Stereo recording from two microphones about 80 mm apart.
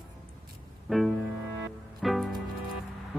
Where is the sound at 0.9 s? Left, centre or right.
Centre.